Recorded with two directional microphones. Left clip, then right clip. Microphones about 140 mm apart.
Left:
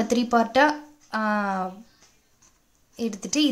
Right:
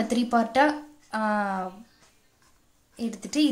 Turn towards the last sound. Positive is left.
turn(degrees=35)  # may be behind; listen again after turning